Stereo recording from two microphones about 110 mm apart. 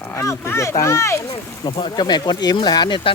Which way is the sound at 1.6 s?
45° left (ahead or behind).